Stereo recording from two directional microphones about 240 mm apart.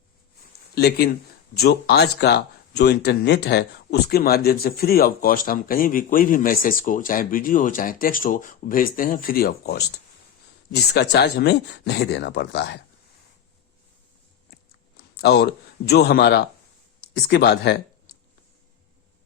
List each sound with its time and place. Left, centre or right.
0.8 s speech: left
15.1 s a sound: left
15.9 s speech: left